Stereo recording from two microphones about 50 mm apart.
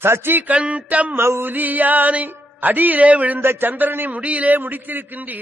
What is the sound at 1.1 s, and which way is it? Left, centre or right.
Speech, right.